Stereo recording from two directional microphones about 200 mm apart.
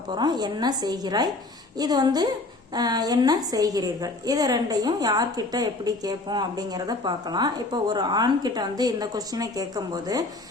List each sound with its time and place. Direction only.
0.1 s a woman's voice: 20° right (ahead or behind)